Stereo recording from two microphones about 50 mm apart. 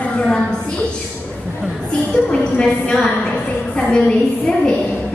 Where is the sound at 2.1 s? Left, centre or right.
Centre.